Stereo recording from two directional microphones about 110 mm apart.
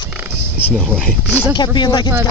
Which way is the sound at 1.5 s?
40° left (ahead or behind).